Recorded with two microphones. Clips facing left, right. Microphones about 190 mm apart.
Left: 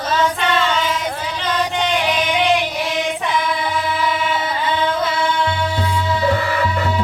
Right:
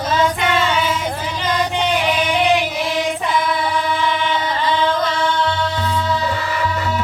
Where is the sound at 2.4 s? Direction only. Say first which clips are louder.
Right 1 dB; 10° right (ahead or behind).